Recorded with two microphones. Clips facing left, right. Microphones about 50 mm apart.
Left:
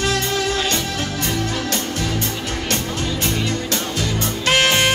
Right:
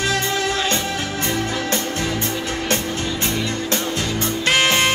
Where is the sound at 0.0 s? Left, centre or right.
Right.